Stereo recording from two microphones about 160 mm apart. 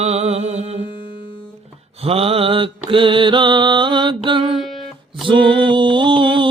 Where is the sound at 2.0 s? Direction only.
35° right (ahead or behind).